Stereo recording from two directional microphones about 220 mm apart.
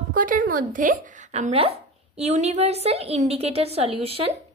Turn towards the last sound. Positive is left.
turn(degrees=-25)  # may be behind; listen again after turning